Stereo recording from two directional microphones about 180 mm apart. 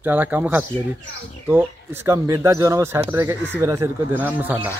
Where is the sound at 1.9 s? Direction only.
15° right (ahead or behind).